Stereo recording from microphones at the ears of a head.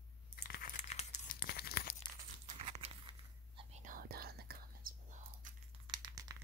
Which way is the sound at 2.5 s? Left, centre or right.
Right.